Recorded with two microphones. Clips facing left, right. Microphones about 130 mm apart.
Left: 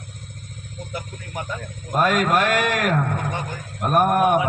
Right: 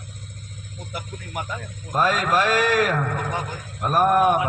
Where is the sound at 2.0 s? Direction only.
55° left (ahead or behind).